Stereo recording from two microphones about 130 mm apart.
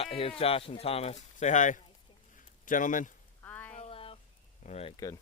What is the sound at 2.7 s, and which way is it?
Speech, 85° left.